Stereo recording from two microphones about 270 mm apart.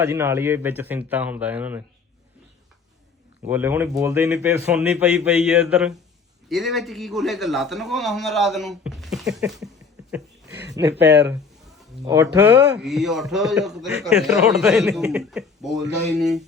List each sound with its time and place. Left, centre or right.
0.0 s speech: centre
3.4 s a man's voice: centre
10.1 s a sound: centre
10.8 s speech: right
12.0 s speech: centre
12.8 s a man's voice: centre